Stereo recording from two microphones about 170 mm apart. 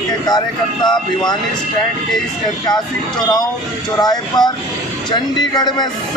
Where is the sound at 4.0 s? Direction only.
25° left (ahead or behind).